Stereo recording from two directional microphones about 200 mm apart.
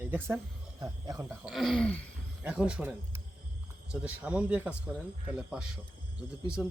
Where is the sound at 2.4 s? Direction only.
5° right (ahead or behind).